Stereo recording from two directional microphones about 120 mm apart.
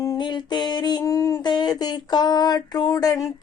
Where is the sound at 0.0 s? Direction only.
35° left (ahead or behind).